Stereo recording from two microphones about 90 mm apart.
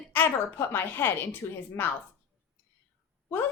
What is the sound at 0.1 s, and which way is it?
Speech, 25° left (ahead or behind).